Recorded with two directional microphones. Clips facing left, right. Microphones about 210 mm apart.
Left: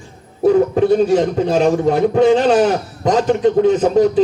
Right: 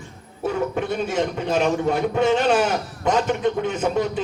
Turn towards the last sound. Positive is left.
turn(degrees=35)  # may be behind; listen again after turning